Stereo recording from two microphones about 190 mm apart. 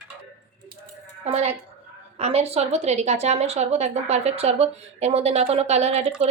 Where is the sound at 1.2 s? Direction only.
35° right (ahead or behind).